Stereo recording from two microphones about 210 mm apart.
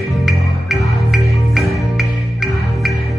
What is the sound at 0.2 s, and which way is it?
Music, centre (ahead or behind).